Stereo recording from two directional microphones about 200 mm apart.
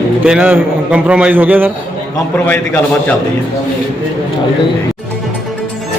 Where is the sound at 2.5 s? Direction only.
10° left (ahead or behind).